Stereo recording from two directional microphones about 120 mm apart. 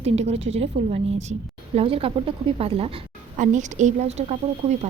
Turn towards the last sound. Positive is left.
turn(degrees=-65)  # may be behind; listen again after turning